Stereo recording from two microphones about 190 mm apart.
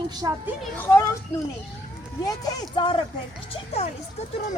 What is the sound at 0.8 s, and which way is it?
Speech, 15° left (ahead or behind).